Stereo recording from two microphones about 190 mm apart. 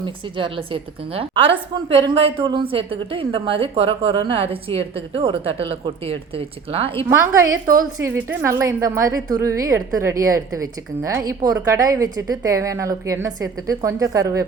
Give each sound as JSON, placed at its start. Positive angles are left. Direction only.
{"t": 0.0, "sound": "a woman's voice", "side_deg": -25}
{"t": 7.9, "sound": "a woman's voice", "side_deg": -15}